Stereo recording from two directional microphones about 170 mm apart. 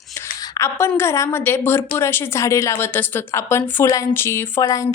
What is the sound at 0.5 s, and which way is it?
A woman's voice, 20° left (ahead or behind).